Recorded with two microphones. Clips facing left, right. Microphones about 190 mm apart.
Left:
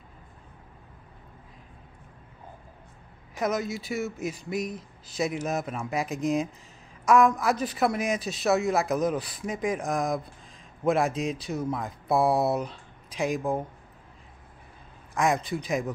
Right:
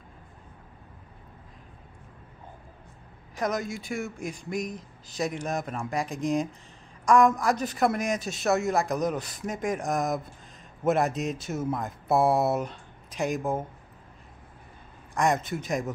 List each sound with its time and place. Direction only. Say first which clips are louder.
3.3 s speech: left 1 dB; 5° left (ahead or behind)
4.7 s speech: left 2 dB; 40° right (ahead or behind)
5.3 s speech: left 1 dB; 5° left (ahead or behind)
15.1 s speech: even; centre (ahead or behind)